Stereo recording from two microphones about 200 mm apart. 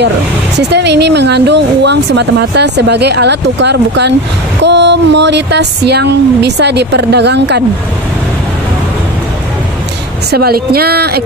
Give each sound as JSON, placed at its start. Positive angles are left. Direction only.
{"t": 0.6, "sound": "speech", "side_deg": -55}
{"t": 10.3, "sound": "speech", "side_deg": -50}